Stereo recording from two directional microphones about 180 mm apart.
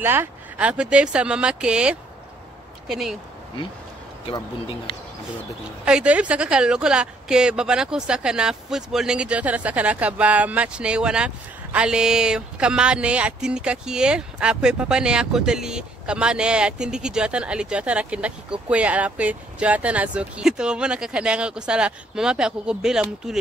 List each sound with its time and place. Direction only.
0.0 s speech: 10° right (ahead or behind)
4.3 s speech: 30° left (ahead or behind)
5.9 s speech: 5° right (ahead or behind)